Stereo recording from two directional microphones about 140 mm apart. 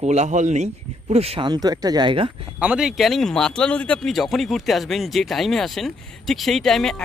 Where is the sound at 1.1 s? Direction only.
45° right (ahead or behind).